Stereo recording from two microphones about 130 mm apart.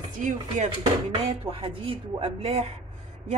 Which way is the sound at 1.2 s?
45° right (ahead or behind).